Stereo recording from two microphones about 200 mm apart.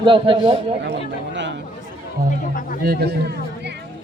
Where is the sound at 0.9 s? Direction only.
60° right (ahead or behind).